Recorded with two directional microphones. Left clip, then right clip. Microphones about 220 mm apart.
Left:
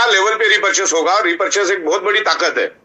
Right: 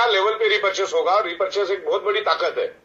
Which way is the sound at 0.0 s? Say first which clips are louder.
Left 5 dB; 40° left (ahead or behind).